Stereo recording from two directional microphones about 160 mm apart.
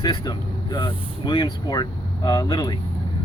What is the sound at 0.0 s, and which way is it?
Speech, 25° left (ahead or behind).